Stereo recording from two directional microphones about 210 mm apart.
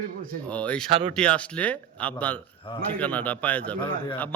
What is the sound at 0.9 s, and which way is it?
Speech, 25° right (ahead or behind).